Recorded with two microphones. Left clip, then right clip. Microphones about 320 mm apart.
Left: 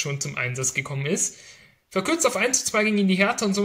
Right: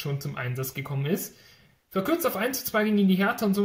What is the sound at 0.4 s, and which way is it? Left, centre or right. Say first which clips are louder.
Speech: left 10 dB; centre.